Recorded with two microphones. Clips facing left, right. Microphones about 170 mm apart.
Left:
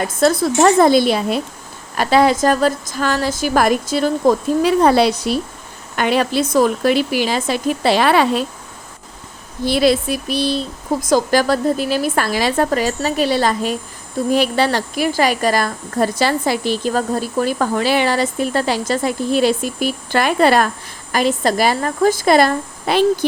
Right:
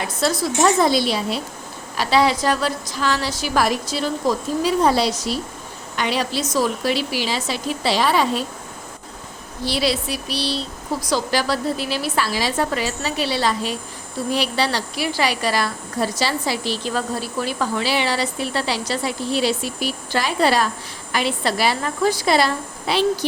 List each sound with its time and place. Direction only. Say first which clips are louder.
0.0 s a woman's voice: left 6 dB; 50° left (ahead or behind)
9.6 s a woman's voice: left 7 dB; 50° left (ahead or behind)
21.1 s a woman's voice: left 5 dB; 45° left (ahead or behind)